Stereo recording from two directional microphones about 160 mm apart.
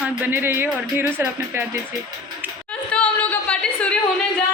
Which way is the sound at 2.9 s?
10° left (ahead or behind).